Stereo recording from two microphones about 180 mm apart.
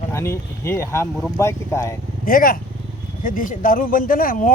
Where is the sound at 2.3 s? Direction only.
50° left (ahead or behind).